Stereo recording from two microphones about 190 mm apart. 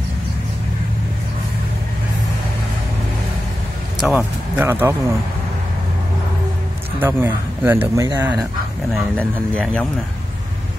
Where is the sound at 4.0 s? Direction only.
5° right (ahead or behind).